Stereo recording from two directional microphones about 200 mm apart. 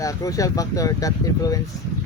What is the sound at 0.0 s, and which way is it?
Speech, 15° left (ahead or behind).